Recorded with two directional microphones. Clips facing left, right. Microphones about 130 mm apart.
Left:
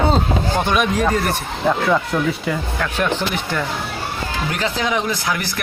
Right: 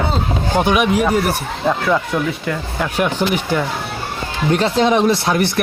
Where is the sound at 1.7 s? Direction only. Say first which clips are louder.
Even; centre (ahead or behind).